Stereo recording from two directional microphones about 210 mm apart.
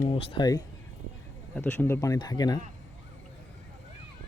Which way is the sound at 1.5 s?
10° left (ahead or behind).